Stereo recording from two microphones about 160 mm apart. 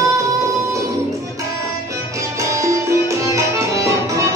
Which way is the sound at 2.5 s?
20° right (ahead or behind).